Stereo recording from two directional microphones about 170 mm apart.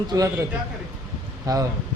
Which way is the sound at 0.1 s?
20° right (ahead or behind).